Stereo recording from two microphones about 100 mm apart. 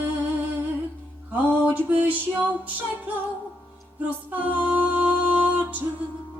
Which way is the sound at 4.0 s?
15° right (ahead or behind).